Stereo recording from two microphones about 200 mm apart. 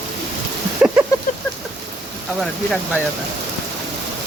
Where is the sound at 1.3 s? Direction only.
40° left (ahead or behind).